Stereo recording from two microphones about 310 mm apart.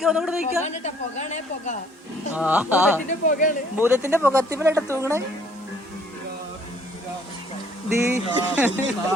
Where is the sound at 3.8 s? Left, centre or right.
Centre.